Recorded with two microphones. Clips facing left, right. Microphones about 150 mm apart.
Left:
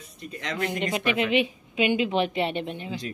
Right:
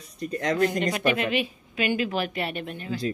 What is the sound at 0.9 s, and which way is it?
A woman's voice, 20° left (ahead or behind).